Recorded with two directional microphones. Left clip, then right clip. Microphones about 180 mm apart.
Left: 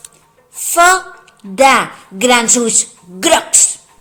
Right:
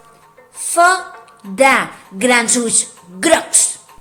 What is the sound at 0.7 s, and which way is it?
A woman's voice, 25° left (ahead or behind).